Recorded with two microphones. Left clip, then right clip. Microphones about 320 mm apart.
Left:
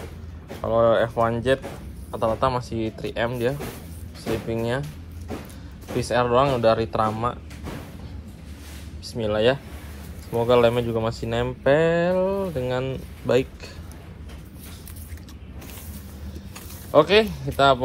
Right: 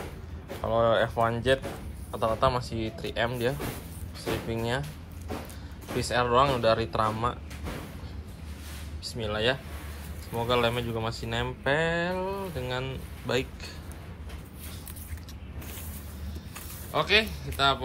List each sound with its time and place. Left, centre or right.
0.7 s a man's voice: centre
5.9 s speech: centre
9.0 s speech: centre
16.9 s speech: centre